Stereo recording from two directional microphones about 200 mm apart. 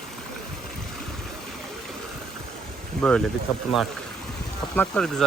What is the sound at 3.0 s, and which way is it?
Speech, 5° left (ahead or behind).